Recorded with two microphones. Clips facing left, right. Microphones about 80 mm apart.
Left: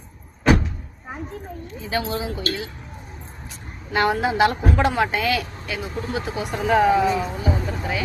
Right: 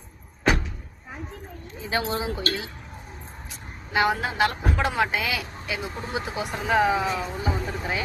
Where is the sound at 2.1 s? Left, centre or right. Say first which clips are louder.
Left 1 dB; right.